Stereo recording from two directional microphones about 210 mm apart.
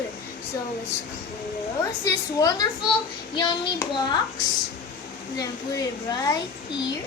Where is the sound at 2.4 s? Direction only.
20° left (ahead or behind).